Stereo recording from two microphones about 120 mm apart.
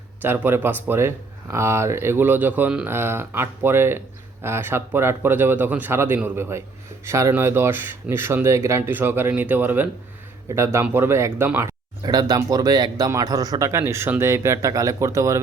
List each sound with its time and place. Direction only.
0.2 s speech: 15° right (ahead or behind)
12.0 s speech: 35° right (ahead or behind)